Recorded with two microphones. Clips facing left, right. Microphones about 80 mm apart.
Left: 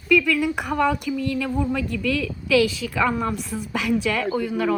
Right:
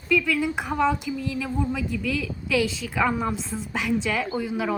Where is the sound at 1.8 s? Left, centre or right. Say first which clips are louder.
Left 2 dB; left.